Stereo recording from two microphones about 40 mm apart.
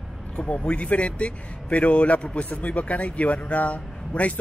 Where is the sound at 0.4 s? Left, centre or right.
Left.